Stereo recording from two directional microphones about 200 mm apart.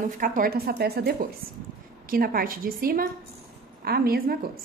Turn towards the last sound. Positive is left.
turn(degrees=-50)  # may be behind; listen again after turning